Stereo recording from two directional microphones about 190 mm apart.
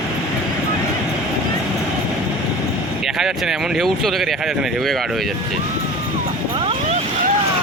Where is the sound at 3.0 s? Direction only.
Centre (ahead or behind).